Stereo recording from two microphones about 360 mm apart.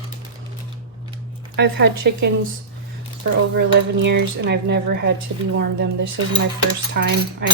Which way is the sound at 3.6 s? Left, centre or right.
Right.